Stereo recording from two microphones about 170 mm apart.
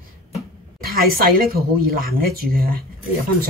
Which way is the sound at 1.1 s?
60° right (ahead or behind).